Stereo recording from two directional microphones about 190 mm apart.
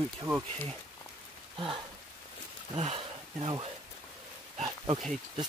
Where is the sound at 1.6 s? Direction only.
25° right (ahead or behind).